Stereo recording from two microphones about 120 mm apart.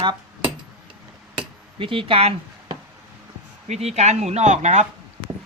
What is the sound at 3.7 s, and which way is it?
Speech, 65° right (ahead or behind).